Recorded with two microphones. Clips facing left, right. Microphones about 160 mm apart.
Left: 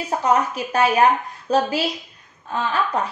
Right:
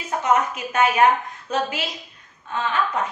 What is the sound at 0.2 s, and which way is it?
A woman's voice, 35° left (ahead or behind).